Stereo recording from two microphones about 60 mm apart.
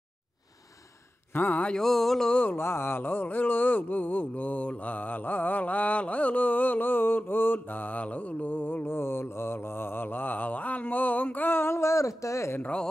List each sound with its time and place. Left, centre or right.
1.3 s speech: left
1.8 s mantra: centre
2.5 s a sound: left